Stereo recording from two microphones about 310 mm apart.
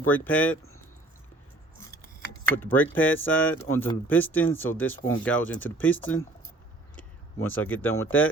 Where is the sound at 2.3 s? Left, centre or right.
Centre.